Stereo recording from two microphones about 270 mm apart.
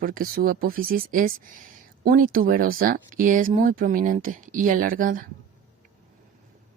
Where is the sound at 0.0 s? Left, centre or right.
Right.